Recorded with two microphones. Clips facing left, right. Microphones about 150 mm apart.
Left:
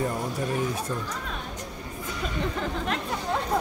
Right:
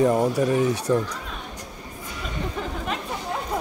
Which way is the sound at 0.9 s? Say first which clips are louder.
Right 10 dB; 85° right.